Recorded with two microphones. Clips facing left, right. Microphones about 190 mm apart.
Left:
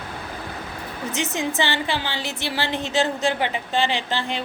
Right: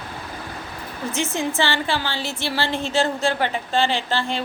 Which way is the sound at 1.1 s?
20° left (ahead or behind).